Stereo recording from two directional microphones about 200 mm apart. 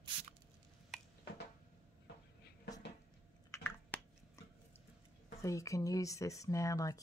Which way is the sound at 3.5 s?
10° left (ahead or behind).